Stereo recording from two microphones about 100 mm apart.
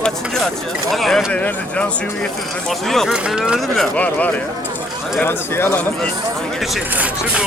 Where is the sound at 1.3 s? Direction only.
10° left (ahead or behind).